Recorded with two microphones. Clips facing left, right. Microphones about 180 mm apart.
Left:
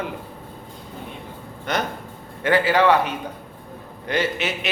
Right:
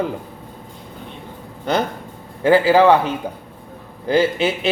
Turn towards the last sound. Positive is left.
turn(degrees=-30)  # may be behind; listen again after turning